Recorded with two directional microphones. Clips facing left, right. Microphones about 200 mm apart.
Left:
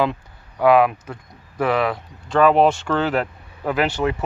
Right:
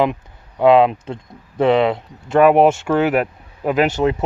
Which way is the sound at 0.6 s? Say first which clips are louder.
Right 3 dB; 25° right (ahead or behind).